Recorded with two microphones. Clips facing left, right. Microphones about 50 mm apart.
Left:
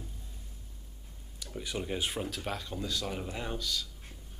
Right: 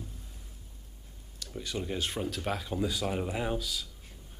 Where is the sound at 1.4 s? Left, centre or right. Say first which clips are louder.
Right 1 dB; centre.